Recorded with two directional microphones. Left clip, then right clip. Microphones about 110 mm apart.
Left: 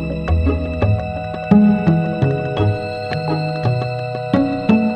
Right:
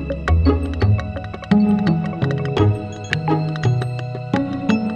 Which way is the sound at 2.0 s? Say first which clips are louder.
Left 4 dB; centre (ahead or behind).